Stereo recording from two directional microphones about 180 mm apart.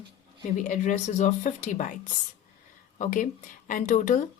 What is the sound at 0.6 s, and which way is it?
A woman's voice, 45° left (ahead or behind).